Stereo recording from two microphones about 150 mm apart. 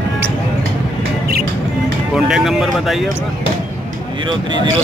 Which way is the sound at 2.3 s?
Centre (ahead or behind).